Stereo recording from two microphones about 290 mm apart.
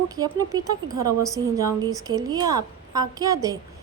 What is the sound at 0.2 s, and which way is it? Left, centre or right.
A woman's voice, centre.